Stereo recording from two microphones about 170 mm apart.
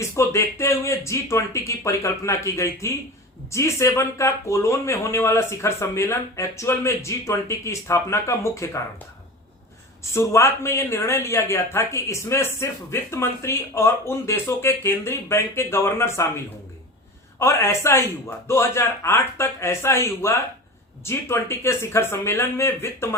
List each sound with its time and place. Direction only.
0.0 s speech: 15° left (ahead or behind)
10.0 s speech: 15° left (ahead or behind)
17.4 s speech: 15° left (ahead or behind)